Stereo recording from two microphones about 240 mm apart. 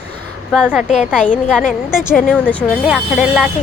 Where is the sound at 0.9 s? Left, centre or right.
Left.